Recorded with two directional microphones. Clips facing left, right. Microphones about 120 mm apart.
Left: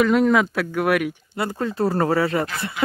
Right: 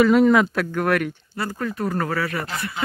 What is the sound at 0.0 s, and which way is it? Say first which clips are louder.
Speech: right 2 dB; centre (ahead or behind).